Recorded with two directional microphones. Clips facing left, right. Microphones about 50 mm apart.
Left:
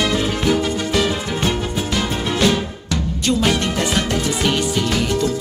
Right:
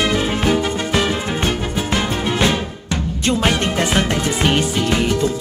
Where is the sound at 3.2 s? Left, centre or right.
Right.